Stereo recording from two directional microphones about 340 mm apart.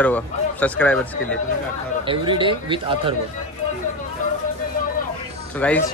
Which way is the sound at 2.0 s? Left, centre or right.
Centre.